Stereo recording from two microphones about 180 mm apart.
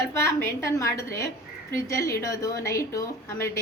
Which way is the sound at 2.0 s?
15° left (ahead or behind).